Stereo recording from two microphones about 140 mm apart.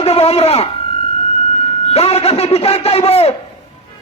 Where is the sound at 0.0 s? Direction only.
45° left (ahead or behind).